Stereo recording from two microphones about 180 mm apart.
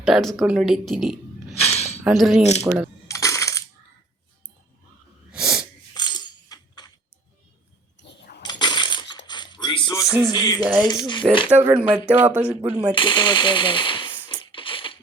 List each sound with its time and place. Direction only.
0.0 s speech: centre (ahead or behind)
3.1 s coin: 15° left (ahead or behind)
5.3 s sneeze: 5° right (ahead or behind)
6.0 s coin: 25° left (ahead or behind)
8.0 s a sound: 75° left (ahead or behind)
8.4 s coin: 25° left (ahead or behind)
9.2 s a sound: 25° left (ahead or behind)
10.2 s speech: 20° left (ahead or behind)
11.4 s speech: 10° right (ahead or behind)
12.9 s speech: 25° left (ahead or behind)
14.3 s music: 25° left (ahead or behind)